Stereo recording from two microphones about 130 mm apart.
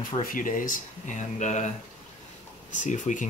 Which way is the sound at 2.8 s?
75° left (ahead or behind).